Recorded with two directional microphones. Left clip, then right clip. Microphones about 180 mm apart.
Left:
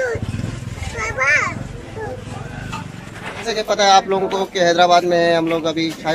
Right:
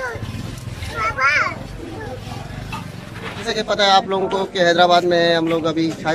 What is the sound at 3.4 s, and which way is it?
Speech, centre (ahead or behind).